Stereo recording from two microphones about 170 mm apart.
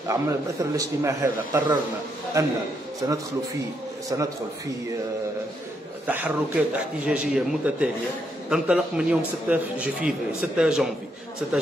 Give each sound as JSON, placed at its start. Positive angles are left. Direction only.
{"t": 0.1, "sound": "a man's voice", "side_deg": -20}
{"t": 6.0, "sound": "a man's voice", "side_deg": -10}